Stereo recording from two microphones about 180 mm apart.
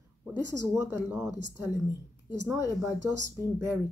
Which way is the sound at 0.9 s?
15° right (ahead or behind).